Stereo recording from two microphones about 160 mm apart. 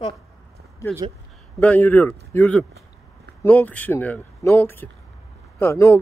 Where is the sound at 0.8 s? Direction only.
20° left (ahead or behind).